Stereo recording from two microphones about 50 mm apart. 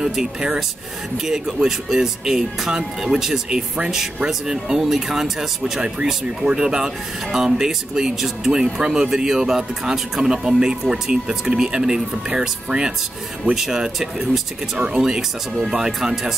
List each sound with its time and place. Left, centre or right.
0.0 s speech: centre